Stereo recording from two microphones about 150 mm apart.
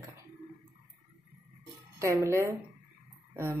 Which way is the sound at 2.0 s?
20° right (ahead or behind).